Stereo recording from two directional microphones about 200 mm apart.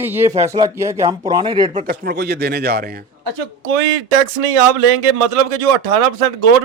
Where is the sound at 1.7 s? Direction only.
45° right (ahead or behind).